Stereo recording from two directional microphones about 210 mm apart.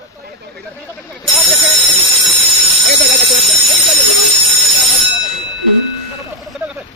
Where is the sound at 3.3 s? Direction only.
Centre (ahead or behind).